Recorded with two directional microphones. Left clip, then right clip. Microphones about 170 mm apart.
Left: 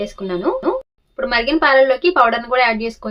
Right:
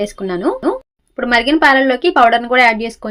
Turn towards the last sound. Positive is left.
turn(degrees=-30)  # may be behind; listen again after turning